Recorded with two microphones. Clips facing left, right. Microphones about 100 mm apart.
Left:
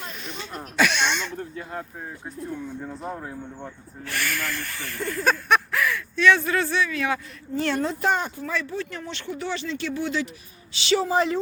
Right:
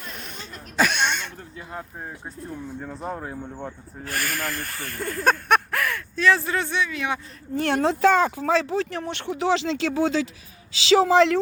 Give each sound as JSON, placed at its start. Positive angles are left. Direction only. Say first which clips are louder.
{"t": 0.8, "sound": "a sound", "louder": "even", "side_deg": -45}
{"t": 3.0, "sound": "speech", "louder": "right 4 dB", "side_deg": -15}
{"t": 4.0, "sound": "speech", "louder": "right 1 dB", "side_deg": -40}
{"t": 6.2, "sound": "speech", "louder": "left 1 dB", "side_deg": -30}
{"t": 7.5, "sound": "speech", "louder": "right 3 dB", "side_deg": -55}